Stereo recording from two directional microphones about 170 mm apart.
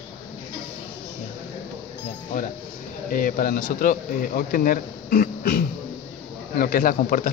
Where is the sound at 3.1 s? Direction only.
60° left (ahead or behind).